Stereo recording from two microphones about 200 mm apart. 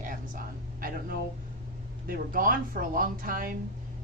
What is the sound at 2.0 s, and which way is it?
Speech, 45° right (ahead or behind).